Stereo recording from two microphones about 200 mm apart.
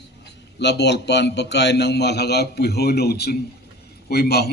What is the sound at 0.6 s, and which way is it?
A man's voice, 55° left (ahead or behind).